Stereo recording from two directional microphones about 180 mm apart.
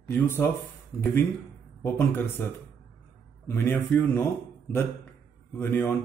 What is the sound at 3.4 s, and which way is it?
Speech, 15° left (ahead or behind).